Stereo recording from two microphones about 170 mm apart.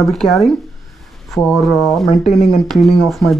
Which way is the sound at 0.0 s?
Centre (ahead or behind).